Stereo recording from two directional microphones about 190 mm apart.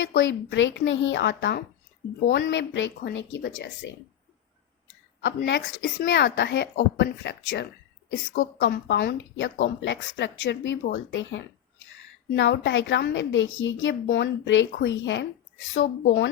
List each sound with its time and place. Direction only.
0.0 s a woman's voice: 80° left
5.2 s a woman's voice: 70° left (ahead or behind)
6.1 s speech: 65° left (ahead or behind)
7.4 s a woman's voice: 70° left (ahead or behind)
8.1 s a woman's voice: 90° left